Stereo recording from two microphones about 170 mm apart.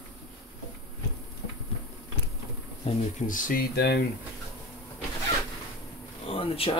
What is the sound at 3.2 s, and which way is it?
Speech, 50° left (ahead or behind).